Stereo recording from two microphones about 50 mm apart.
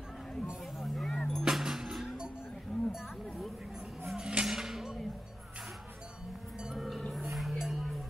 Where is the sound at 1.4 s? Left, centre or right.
Centre.